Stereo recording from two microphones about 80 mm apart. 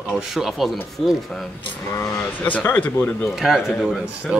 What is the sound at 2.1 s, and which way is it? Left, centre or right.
Speech, left.